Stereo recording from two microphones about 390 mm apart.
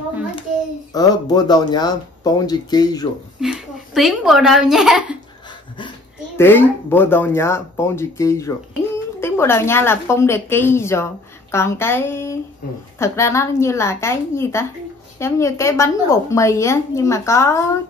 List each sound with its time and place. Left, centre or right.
0.9 s a woman's voice: centre
3.3 s a woman's voice: centre